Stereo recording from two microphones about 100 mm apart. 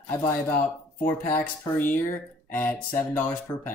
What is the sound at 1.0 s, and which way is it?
Speech, 20° left (ahead or behind).